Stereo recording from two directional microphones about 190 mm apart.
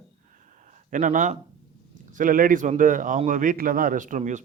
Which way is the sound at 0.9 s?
45° right (ahead or behind).